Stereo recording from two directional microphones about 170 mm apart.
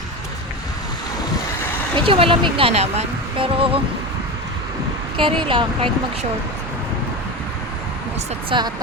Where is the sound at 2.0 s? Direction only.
30° right (ahead or behind).